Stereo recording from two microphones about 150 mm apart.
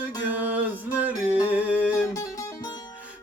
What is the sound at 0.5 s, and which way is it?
Music, 10° right (ahead or behind).